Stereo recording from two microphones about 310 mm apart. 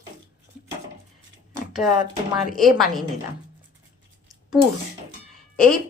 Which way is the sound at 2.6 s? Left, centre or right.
Centre.